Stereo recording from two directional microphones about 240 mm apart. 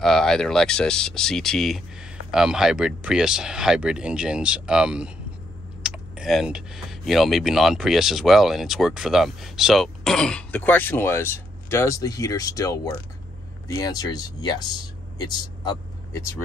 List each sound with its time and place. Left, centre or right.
0.0 s speech: centre